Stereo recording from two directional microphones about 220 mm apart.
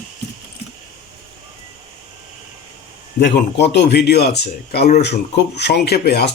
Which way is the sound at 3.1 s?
50° left (ahead or behind).